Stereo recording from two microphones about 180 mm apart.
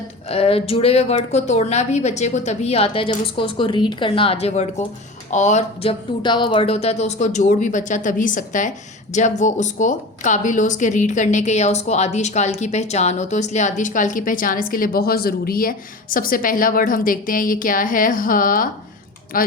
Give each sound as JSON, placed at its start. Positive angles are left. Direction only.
{"t": 0.3, "sound": "a woman's voice", "side_deg": 35}